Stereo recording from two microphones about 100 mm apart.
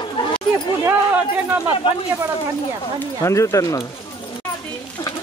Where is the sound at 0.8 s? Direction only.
20° right (ahead or behind).